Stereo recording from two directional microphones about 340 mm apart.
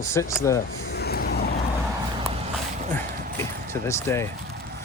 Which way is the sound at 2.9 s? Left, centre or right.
Centre.